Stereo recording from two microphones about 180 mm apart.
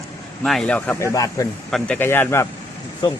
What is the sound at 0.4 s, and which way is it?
Speech, 5° left (ahead or behind).